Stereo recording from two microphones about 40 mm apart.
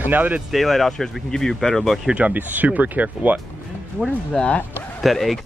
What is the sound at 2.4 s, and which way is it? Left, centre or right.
Speech, right.